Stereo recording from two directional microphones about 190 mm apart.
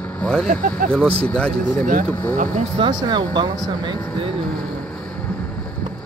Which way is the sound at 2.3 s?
40° right (ahead or behind).